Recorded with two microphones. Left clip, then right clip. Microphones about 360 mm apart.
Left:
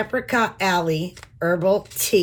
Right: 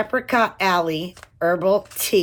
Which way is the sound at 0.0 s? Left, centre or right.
Centre.